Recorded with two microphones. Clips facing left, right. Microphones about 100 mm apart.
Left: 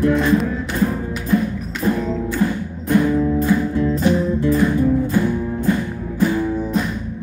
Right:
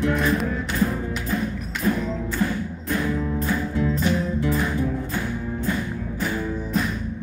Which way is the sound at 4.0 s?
40° left (ahead or behind).